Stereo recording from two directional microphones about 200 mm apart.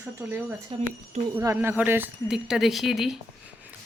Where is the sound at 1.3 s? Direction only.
10° right (ahead or behind).